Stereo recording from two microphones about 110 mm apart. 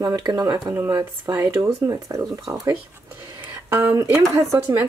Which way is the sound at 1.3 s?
20° right (ahead or behind).